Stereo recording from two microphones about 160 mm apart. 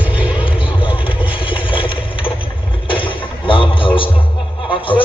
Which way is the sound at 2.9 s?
30° left (ahead or behind).